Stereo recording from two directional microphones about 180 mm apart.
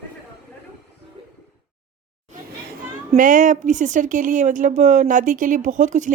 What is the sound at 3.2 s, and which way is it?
Speech, 45° right (ahead or behind).